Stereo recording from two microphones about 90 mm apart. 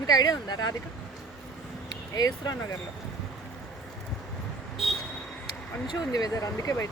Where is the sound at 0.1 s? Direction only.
45° left (ahead or behind).